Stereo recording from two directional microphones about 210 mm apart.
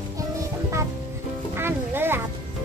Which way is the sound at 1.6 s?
10° right (ahead or behind).